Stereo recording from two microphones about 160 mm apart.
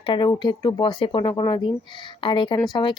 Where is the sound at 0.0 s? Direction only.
30° left (ahead or behind).